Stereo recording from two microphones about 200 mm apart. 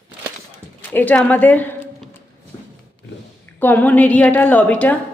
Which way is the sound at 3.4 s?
10° left (ahead or behind).